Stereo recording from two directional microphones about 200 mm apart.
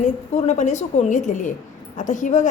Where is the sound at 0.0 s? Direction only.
35° left (ahead or behind).